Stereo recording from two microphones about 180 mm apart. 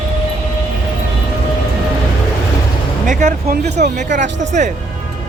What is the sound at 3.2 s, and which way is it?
Speech, 45° right (ahead or behind).